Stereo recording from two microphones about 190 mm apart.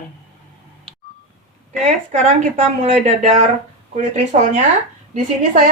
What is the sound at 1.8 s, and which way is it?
Speech, 40° right (ahead or behind).